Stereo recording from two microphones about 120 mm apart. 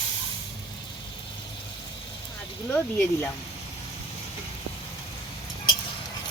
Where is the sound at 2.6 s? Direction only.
15° left (ahead or behind).